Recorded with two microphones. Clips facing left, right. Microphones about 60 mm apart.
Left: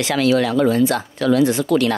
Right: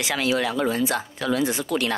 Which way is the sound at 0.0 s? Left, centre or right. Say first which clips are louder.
Left 6 dB; centre.